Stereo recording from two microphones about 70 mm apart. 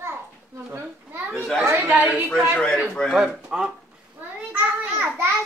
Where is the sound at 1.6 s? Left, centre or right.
Right.